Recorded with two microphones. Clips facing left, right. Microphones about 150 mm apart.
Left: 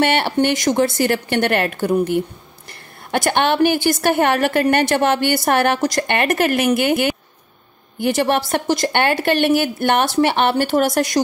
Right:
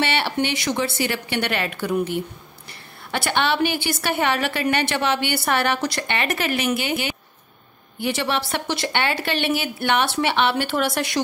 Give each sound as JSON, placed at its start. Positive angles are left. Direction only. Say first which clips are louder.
{"t": 0.0, "sound": "a woman's voice", "louder": "left 6 dB", "side_deg": 50}